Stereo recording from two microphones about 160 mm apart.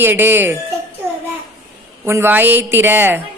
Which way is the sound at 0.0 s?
15° right (ahead or behind).